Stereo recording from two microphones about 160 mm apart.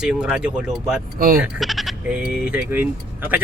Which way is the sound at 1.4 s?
5° right (ahead or behind).